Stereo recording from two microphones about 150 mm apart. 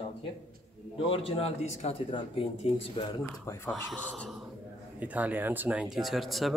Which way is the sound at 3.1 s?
20° left (ahead or behind).